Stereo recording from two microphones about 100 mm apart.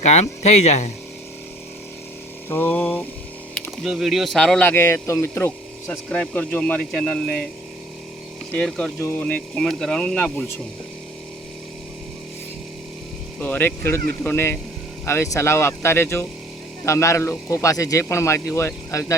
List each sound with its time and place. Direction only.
0.0 s speech: 90° left
2.5 s speech: 20° left (ahead or behind)
3.8 s speech: 5° right (ahead or behind)
4.6 s speech: 25° left (ahead or behind)
6.1 s speech: 10° left (ahead or behind)
8.5 s speech: 10° left (ahead or behind)
9.0 s speech: 20° left (ahead or behind)
9.2 s speech: 10° left (ahead or behind)
13.4 s speech: 20° left (ahead or behind)